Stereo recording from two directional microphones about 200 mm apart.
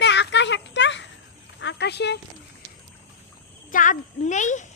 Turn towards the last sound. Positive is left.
turn(degrees=35)  # may be behind; listen again after turning